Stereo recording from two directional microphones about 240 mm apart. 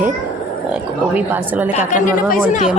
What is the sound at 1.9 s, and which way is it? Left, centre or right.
Speech, left.